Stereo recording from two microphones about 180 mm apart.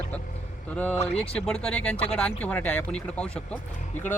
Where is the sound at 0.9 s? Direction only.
35° left (ahead or behind).